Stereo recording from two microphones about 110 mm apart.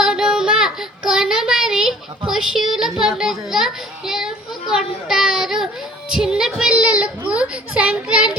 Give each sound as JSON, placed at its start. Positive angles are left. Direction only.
{"t": 0.0, "sound": "child singing", "side_deg": -5}
{"t": 3.0, "sound": "a sound", "side_deg": -5}
{"t": 6.1, "sound": "child singing", "side_deg": -5}